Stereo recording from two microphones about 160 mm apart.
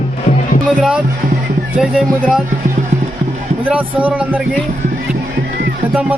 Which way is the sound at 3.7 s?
10° right (ahead or behind).